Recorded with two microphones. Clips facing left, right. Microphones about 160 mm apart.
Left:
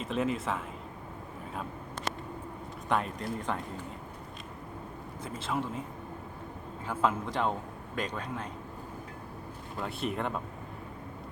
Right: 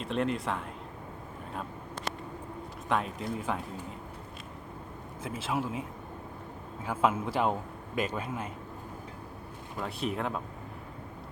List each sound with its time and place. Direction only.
0.0 s speech: centre (ahead or behind)
2.9 s speech: centre (ahead or behind)
5.2 s speech: 5° right (ahead or behind)
6.8 s a man's voice: 5° right (ahead or behind)
9.8 s speech: centre (ahead or behind)